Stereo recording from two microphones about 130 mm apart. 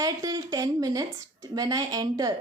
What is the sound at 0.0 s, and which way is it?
A woman's voice, 30° right (ahead or behind).